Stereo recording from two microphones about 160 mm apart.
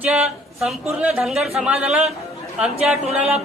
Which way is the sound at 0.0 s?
5° right (ahead or behind).